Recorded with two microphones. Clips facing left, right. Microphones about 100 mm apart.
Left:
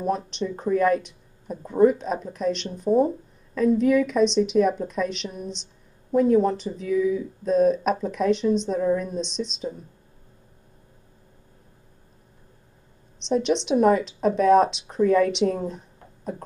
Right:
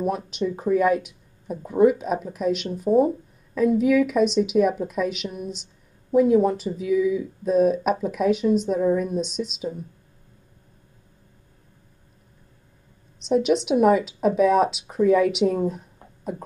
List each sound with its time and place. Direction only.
0.0 s speech: 5° right (ahead or behind)
13.2 s speech: 5° right (ahead or behind)